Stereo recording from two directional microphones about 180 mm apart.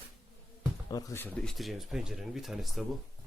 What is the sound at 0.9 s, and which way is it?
Speech, 20° left (ahead or behind).